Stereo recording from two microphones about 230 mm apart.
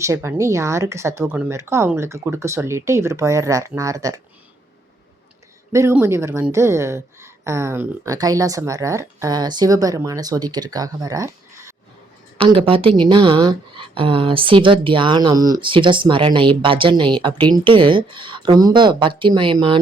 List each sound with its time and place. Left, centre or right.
0.0 s speech: centre
5.7 s a woman's voice: centre